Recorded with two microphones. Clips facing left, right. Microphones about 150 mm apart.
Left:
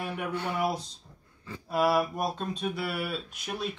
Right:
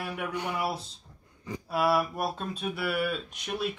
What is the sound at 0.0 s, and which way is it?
Speech, 10° right (ahead or behind).